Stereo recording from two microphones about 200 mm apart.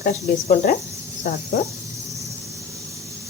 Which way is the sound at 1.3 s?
45° left (ahead or behind).